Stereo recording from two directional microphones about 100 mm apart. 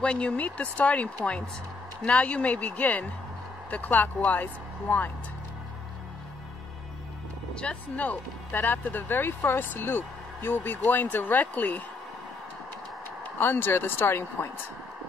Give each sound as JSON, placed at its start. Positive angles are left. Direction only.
{"t": 0.0, "sound": "speech", "side_deg": 10}
{"t": 7.5, "sound": "speech", "side_deg": 15}
{"t": 13.2, "sound": "speech", "side_deg": 20}